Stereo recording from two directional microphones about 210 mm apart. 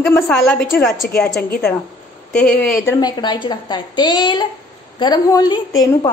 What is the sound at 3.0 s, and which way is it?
A woman's voice, 20° left (ahead or behind).